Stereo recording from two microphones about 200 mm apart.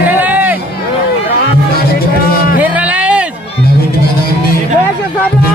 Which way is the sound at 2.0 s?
50° left (ahead or behind).